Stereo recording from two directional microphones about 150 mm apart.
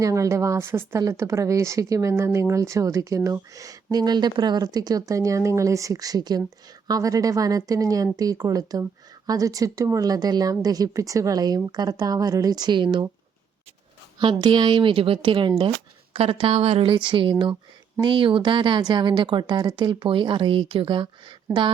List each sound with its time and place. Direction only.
0.0 s speech: 20° right (ahead or behind)
14.2 s speech: 30° right (ahead or behind)